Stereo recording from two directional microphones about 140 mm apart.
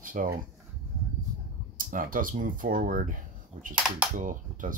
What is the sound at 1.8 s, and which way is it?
Speech, 75° right (ahead or behind).